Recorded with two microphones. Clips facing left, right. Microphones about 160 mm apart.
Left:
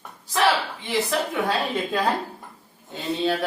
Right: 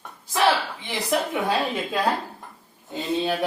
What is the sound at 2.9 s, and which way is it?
Speech, 15° right (ahead or behind).